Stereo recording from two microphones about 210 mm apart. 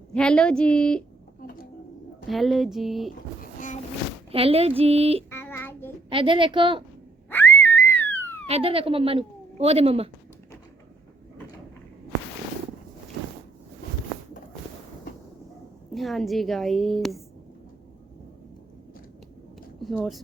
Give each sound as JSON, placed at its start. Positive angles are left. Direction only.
{"t": 0.1, "sound": "a woman's voice", "side_deg": 5}
{"t": 1.4, "sound": "a sound", "side_deg": 45}
{"t": 2.2, "sound": "a woman's voice", "side_deg": 0}
{"t": 3.4, "sound": "boat", "side_deg": 40}
{"t": 4.3, "sound": "a woman's voice", "side_deg": -25}
{"t": 5.3, "sound": "child singing", "side_deg": 10}
{"t": 6.1, "sound": "a woman's voice", "side_deg": -25}
{"t": 7.3, "sound": "a sound", "side_deg": 10}
{"t": 8.4, "sound": "speech", "side_deg": -30}
{"t": 15.9, "sound": "a woman's voice", "side_deg": 0}
{"t": 19.8, "sound": "speech", "side_deg": 0}